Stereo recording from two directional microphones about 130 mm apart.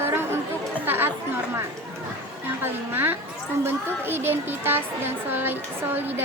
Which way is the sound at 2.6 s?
15° right (ahead or behind).